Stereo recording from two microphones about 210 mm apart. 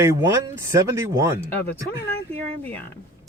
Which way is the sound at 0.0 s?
15° right (ahead or behind).